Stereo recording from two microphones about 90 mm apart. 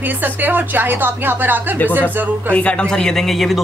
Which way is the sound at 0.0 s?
20° right (ahead or behind).